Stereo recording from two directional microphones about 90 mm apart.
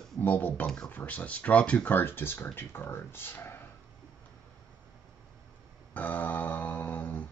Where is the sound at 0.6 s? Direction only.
5° left (ahead or behind).